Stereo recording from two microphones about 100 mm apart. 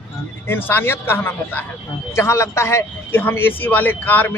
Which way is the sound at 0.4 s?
20° left (ahead or behind).